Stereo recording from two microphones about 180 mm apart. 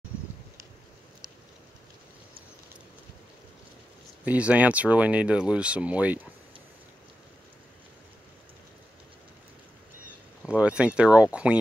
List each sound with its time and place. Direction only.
4.2 s speech: 5° right (ahead or behind)
10.4 s speech: 5° right (ahead or behind)